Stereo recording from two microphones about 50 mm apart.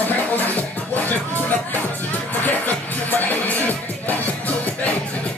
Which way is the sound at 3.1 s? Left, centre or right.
Left.